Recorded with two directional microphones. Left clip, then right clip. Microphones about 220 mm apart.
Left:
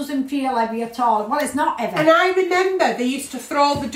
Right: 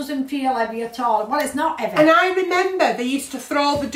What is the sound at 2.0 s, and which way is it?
A woman's voice, 15° right (ahead or behind).